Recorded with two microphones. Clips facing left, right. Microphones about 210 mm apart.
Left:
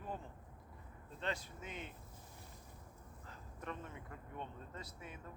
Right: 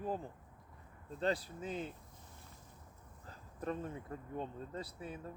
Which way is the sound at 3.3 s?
35° right (ahead or behind).